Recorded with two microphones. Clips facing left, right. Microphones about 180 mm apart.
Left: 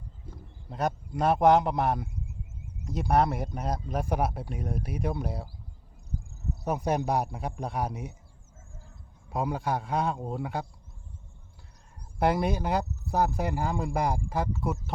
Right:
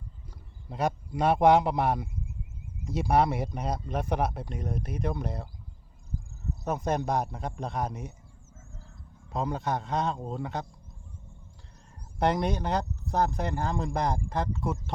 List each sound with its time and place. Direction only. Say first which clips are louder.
0.7 s a man's voice: right 1 dB; centre (ahead or behind)
6.7 s speech: left 1 dB; 10° left (ahead or behind)
9.3 s speech: left 1 dB; 10° left (ahead or behind)
12.2 s speech: left 1 dB; 5° left (ahead or behind)